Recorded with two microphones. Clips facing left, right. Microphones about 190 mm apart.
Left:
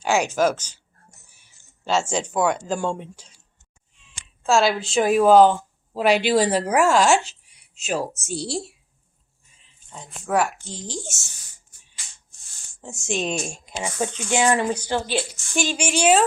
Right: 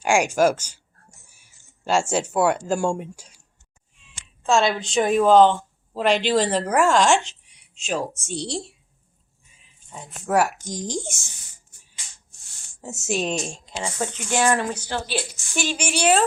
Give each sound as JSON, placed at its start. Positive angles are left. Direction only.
{"t": 0.0, "sound": "speech", "side_deg": -10}
{"t": 4.4, "sound": "speech", "side_deg": 5}
{"t": 9.9, "sound": "speech", "side_deg": -5}
{"t": 12.8, "sound": "speech", "side_deg": -5}
{"t": 13.5, "sound": "speech", "side_deg": 15}